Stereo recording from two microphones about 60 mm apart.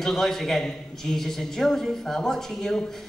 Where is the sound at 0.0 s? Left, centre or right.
Centre.